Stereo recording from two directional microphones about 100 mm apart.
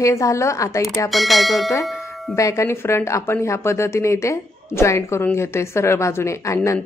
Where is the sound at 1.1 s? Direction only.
Centre (ahead or behind).